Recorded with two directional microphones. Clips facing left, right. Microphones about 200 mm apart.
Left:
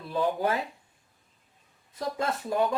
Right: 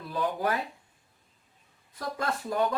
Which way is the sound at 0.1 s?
25° left (ahead or behind).